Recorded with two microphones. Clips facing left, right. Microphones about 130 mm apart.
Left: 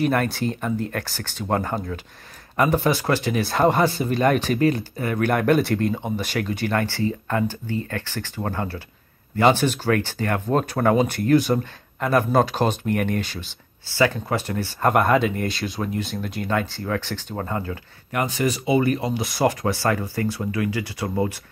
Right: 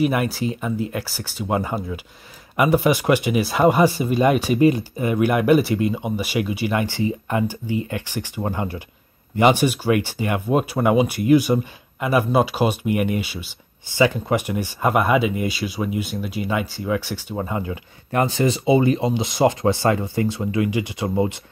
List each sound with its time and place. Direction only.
0.0 s speech: 5° right (ahead or behind)
18.1 s speech: 30° right (ahead or behind)